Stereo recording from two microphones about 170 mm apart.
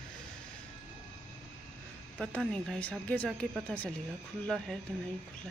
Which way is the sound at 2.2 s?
5° left (ahead or behind).